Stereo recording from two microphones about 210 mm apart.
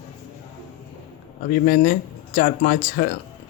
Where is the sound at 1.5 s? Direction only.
40° left (ahead or behind).